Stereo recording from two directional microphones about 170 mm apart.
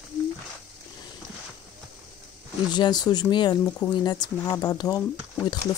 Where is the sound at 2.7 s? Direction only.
25° left (ahead or behind).